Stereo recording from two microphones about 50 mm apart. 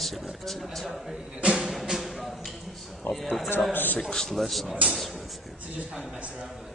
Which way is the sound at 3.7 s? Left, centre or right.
Left.